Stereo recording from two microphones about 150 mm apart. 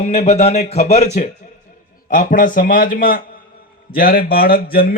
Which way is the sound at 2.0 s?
65° left (ahead or behind).